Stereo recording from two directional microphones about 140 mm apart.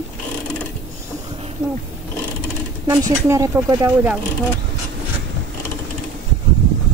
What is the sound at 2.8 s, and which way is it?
Speech, 25° right (ahead or behind).